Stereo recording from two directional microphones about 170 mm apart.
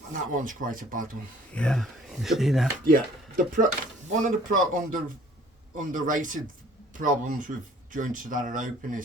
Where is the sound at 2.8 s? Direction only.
55° right (ahead or behind).